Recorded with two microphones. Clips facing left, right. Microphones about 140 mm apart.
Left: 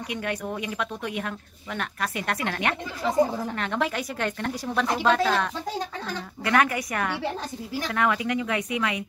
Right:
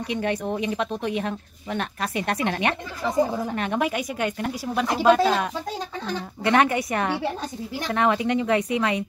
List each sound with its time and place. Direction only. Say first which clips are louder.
0.1 s speech: right 5 dB; 25° right (ahead or behind)